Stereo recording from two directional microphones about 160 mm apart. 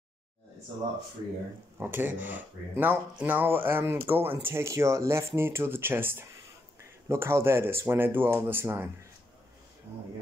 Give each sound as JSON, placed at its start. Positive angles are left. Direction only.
{"t": 1.8, "sound": "speech", "side_deg": -10}